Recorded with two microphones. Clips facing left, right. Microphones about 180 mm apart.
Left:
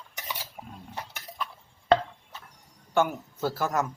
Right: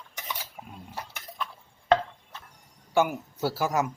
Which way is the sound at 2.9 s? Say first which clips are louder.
Right 1 dB; 10° right (ahead or behind).